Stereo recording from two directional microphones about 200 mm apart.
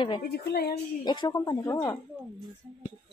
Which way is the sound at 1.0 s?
20° left (ahead or behind).